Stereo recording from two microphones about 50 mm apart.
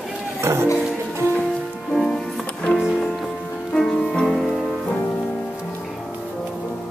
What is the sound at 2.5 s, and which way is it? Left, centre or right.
Music, left.